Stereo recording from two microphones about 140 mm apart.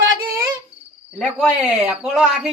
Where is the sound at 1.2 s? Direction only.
Centre (ahead or behind).